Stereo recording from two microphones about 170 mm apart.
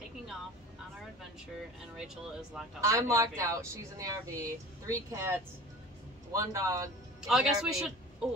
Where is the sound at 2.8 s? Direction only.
20° right (ahead or behind).